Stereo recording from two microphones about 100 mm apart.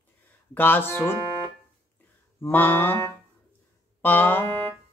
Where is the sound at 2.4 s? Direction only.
20° left (ahead or behind).